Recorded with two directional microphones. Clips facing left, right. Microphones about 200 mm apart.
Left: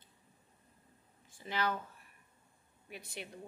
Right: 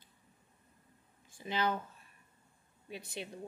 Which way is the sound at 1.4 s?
20° right (ahead or behind).